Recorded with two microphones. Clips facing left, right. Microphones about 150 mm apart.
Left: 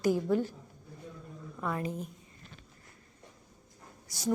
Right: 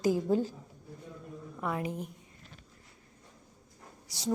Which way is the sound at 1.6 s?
15° right (ahead or behind).